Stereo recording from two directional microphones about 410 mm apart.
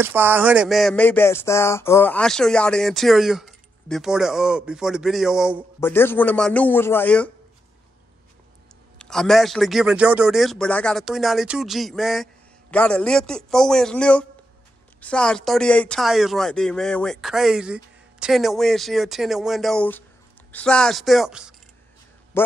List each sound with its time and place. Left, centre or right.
0.0 s speech: centre
8.9 s speech: centre
22.3 s a sound: centre